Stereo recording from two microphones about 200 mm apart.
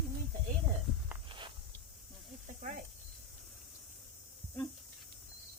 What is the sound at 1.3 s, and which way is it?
Walk, 25° right (ahead or behind).